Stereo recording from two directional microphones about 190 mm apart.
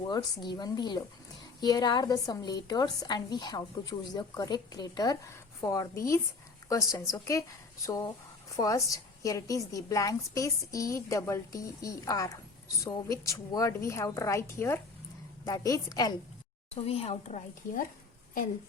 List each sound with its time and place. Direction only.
0.4 s a woman's voice: 20° left (ahead or behind)
16.7 s a woman's voice: 30° left (ahead or behind)